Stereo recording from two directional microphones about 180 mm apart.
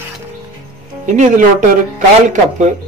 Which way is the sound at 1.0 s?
40° right (ahead or behind).